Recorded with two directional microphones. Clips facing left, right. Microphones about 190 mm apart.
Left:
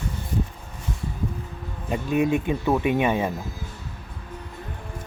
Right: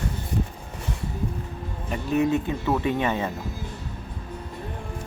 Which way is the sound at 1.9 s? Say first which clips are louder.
Left 1 dB; 15° left (ahead or behind).